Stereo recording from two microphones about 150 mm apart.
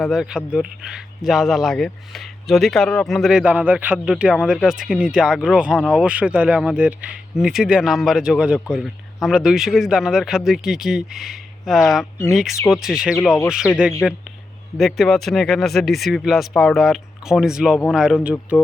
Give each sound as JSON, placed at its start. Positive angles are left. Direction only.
{"t": 0.0, "sound": "speech", "side_deg": -5}